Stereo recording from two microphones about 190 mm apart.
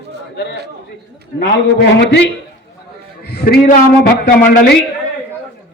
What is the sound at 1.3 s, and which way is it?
Speech, 60° left (ahead or behind).